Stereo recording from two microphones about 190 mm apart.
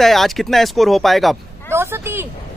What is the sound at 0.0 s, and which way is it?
Speech, centre (ahead or behind).